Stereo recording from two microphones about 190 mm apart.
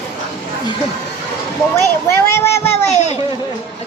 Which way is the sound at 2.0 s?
15° left (ahead or behind).